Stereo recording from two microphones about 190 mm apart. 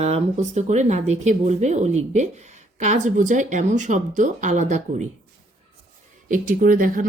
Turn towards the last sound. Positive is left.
turn(degrees=-45)  # may be behind; listen again after turning